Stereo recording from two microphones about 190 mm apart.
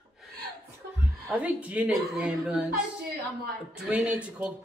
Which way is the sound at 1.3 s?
5° right (ahead or behind).